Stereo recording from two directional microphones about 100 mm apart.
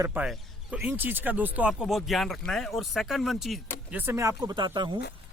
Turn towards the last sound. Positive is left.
turn(degrees=-50)  # may be behind; listen again after turning